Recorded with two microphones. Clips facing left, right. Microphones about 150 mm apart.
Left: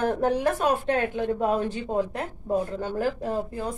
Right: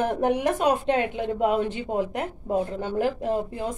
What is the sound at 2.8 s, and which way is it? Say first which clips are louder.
Speech: right 2 dB; 20° right (ahead or behind).